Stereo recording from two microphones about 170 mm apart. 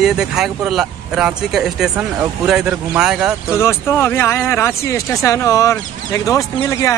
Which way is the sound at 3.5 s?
15° left (ahead or behind).